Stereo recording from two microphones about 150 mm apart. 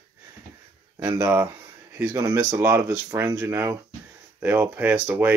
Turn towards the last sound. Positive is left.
turn(degrees=-10)  # may be behind; listen again after turning